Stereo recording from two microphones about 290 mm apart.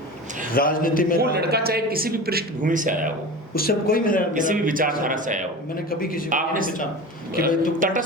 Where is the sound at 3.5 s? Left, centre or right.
Left.